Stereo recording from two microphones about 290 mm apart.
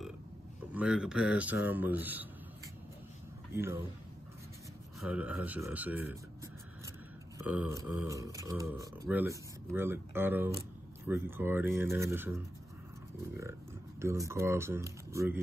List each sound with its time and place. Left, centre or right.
0.7 s speech: centre
3.5 s speech: centre
5.0 s speech: centre
7.3 s speech: centre
14.0 s speech: centre